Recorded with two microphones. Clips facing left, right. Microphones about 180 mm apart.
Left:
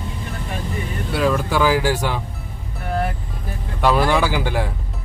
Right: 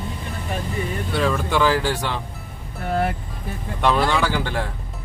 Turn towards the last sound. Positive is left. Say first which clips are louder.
# left 2 dB
turn(degrees=10)  # may be behind; listen again after turning